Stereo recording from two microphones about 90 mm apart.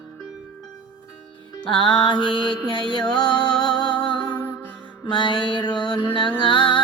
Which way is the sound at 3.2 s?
50° left (ahead or behind).